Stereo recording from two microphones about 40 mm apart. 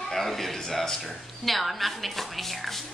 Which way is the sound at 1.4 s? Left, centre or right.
Centre.